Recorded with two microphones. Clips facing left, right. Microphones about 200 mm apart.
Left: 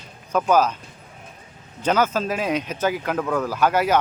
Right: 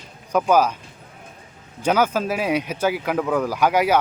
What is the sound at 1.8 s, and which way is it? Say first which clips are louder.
Speech: right 1 dB; 10° right (ahead or behind).